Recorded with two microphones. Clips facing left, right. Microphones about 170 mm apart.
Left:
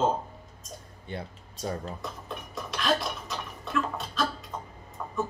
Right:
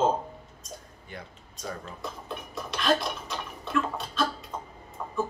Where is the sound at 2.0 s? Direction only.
Centre (ahead or behind).